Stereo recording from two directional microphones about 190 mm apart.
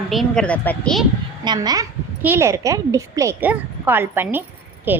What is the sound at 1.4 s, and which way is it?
A woman's voice, 20° right (ahead or behind).